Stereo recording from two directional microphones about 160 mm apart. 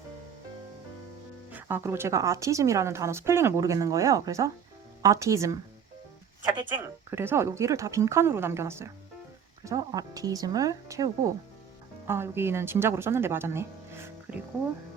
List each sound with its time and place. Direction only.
1.5 s speech: 10° right (ahead or behind)
7.1 s speech: 15° right (ahead or behind)